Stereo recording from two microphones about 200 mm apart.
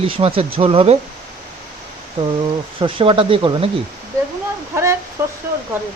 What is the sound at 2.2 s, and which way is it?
Speech, 25° right (ahead or behind).